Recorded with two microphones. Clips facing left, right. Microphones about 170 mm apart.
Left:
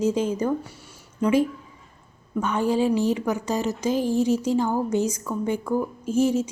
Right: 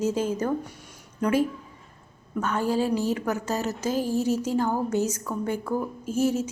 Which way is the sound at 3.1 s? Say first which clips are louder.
Left 2 dB; 10° left (ahead or behind).